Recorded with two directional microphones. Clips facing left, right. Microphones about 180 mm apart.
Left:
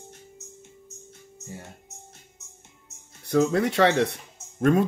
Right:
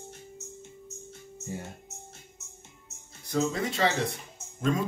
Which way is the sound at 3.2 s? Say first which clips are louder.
Left 7 dB; 65° left (ahead or behind).